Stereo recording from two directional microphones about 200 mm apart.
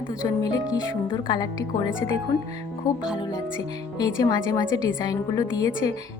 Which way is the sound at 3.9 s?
20° left (ahead or behind).